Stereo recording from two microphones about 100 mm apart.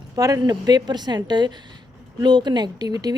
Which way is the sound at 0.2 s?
35° right (ahead or behind).